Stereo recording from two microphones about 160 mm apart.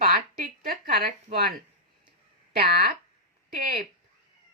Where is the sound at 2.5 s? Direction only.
70° right (ahead or behind).